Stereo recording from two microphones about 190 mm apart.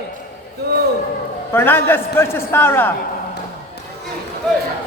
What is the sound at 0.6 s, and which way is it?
Speech, 55° right (ahead or behind).